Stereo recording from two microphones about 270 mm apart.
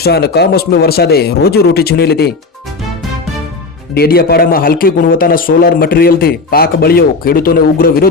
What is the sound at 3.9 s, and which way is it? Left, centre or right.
A man's voice, left.